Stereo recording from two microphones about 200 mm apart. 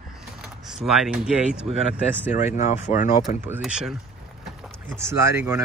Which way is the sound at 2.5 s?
35° left (ahead or behind).